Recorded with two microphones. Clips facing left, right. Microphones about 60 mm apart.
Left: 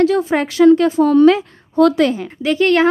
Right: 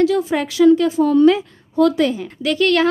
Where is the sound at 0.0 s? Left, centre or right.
Left.